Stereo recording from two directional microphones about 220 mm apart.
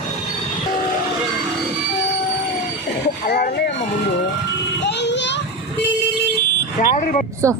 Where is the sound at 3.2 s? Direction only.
45° left (ahead or behind).